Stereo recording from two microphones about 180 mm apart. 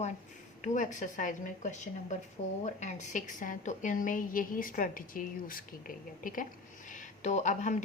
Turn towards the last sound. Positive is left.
turn(degrees=40)  # may be behind; listen again after turning